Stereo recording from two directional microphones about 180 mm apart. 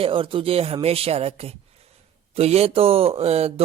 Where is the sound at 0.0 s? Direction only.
30° right (ahead or behind).